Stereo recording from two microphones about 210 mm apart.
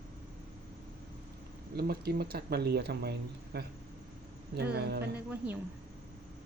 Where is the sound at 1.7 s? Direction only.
50° right (ahead or behind).